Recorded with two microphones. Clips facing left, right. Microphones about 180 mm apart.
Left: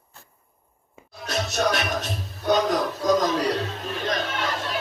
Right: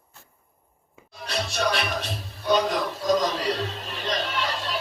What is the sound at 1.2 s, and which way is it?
Music, 45° left (ahead or behind).